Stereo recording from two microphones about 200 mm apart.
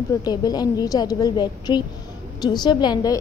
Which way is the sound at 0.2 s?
20° left (ahead or behind).